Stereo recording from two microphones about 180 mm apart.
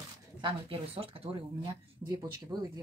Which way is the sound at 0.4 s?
30° right (ahead or behind).